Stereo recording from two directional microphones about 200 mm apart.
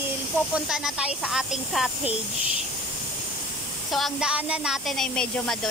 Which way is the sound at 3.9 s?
Centre (ahead or behind).